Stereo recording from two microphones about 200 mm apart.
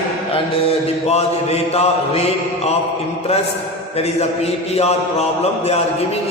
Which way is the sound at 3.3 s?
30° left (ahead or behind).